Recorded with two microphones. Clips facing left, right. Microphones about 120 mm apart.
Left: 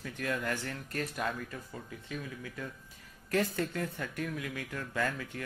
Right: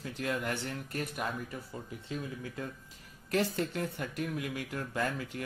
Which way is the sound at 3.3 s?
20° right (ahead or behind).